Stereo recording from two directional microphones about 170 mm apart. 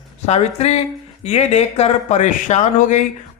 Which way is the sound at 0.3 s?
40° left (ahead or behind).